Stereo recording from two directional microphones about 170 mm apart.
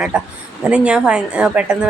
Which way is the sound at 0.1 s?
5° right (ahead or behind).